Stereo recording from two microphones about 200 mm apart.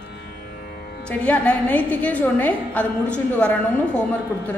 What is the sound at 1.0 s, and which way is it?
A woman's voice, 5° left (ahead or behind).